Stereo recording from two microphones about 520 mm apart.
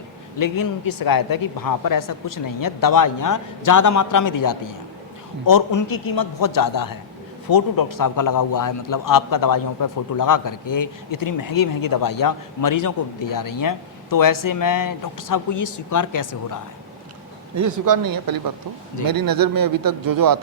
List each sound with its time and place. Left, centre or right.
0.3 s a man's voice: left
17.5 s speech: right